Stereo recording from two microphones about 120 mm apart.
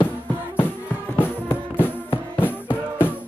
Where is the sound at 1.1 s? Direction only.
15° left (ahead or behind).